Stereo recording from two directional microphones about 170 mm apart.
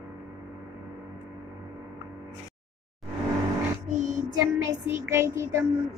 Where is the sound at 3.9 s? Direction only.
45° right (ahead or behind).